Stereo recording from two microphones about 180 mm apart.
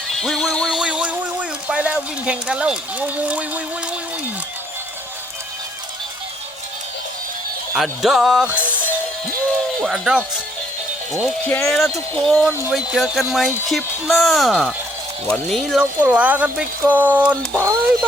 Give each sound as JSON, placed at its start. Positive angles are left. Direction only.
{"t": 0.1, "sound": "a sound", "side_deg": 5}
{"t": 7.8, "sound": "speech", "side_deg": 0}
{"t": 8.6, "sound": "music", "side_deg": 10}
{"t": 9.8, "sound": "speech", "side_deg": 0}